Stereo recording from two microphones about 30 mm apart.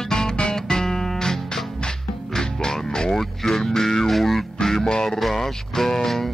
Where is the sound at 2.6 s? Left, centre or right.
Left.